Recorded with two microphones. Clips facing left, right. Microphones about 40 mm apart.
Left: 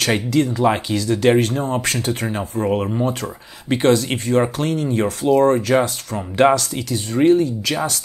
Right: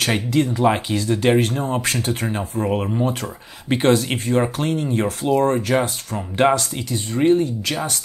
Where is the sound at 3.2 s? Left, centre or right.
Centre.